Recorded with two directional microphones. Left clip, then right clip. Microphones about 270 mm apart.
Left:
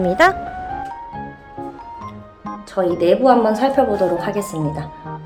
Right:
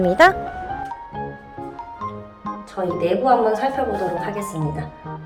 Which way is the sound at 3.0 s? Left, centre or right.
Left.